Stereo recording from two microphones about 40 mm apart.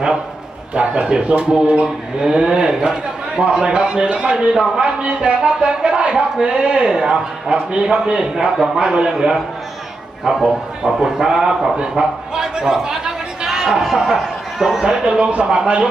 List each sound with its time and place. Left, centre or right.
0.7 s speech: right
1.8 s a man's voice: centre
8.4 s a man's voice: centre
14.8 s a man's voice: centre